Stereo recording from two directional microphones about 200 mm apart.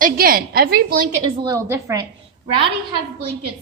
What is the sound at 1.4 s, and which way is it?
Speech, 15° right (ahead or behind).